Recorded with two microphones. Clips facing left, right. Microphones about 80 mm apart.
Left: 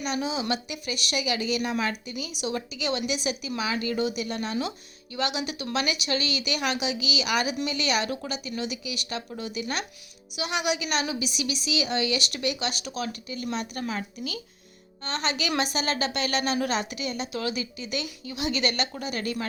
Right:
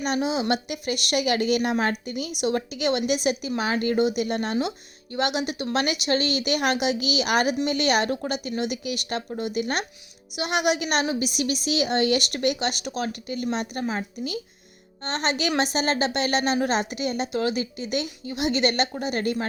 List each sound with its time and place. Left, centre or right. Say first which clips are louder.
0.0 s a woman's voice: right 4 dB; right
13.8 s a woman's voice: right 3 dB; right
15.0 s a woman's voice: right 4 dB; right